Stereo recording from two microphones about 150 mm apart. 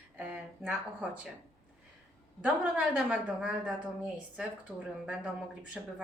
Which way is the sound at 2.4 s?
5° right (ahead or behind).